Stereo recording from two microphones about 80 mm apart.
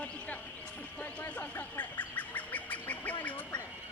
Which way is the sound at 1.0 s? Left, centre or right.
Centre.